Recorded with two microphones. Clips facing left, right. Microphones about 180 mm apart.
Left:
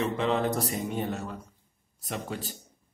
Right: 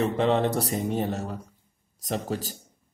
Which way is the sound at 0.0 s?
35° right (ahead or behind).